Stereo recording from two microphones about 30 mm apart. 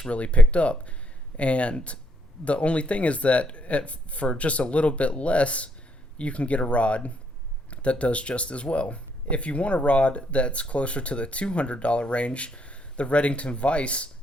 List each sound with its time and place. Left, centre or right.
0.1 s speech: left